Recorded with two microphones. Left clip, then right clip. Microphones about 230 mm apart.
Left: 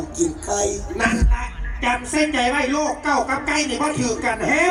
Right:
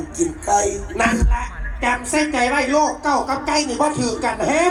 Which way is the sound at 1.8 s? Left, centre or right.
Right.